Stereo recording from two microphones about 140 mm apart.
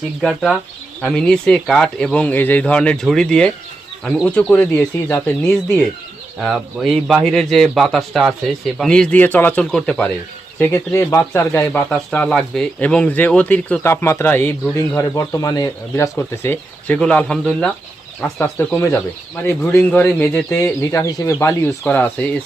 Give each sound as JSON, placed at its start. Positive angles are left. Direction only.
{"t": 0.2, "sound": "speech", "side_deg": 0}
{"t": 6.4, "sound": "speech", "side_deg": -5}
{"t": 10.6, "sound": "speech", "side_deg": 20}
{"t": 16.1, "sound": "speech", "side_deg": 15}